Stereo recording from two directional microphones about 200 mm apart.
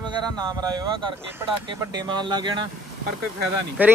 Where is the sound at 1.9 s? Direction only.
20° right (ahead or behind).